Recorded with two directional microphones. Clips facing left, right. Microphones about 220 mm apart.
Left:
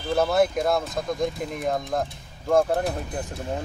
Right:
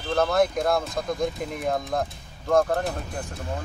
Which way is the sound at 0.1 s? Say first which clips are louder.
Left 1 dB; 5° left (ahead or behind).